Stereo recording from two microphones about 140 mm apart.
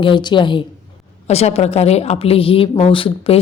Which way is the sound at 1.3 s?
50° left (ahead or behind).